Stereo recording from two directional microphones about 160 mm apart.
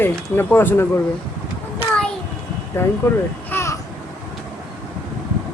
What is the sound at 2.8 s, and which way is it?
Speech, 15° left (ahead or behind).